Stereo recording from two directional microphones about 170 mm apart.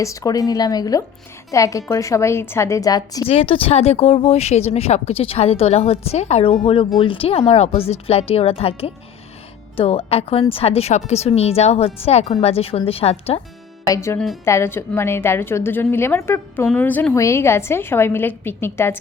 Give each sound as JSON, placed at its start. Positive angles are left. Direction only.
{"t": 0.0, "sound": "a woman's voice", "side_deg": 20}
{"t": 3.2, "sound": "speech", "side_deg": 35}
{"t": 13.8, "sound": "a woman's voice", "side_deg": 20}